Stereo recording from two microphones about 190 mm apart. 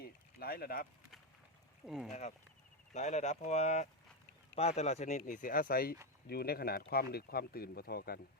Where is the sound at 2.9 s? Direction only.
35° left (ahead or behind); by 8.2 s 50° left (ahead or behind).